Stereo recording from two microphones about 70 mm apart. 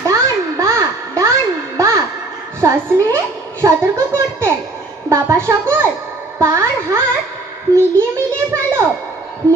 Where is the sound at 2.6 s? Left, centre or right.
Right.